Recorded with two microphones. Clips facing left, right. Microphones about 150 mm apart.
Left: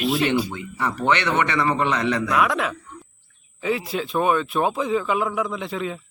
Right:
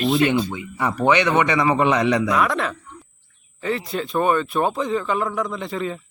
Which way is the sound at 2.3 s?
Centre (ahead or behind).